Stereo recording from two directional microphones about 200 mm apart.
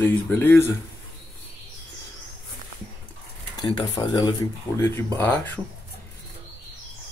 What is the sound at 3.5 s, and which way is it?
Speech, 20° left (ahead or behind).